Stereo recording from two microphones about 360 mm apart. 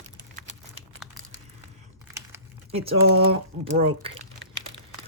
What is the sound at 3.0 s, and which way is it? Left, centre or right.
Speech, right.